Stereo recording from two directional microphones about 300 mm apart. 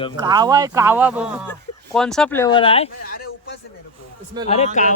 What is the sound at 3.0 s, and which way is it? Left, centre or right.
Speech, left.